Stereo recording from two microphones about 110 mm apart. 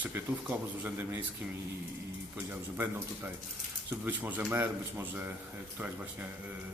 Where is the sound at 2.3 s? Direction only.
20° right (ahead or behind).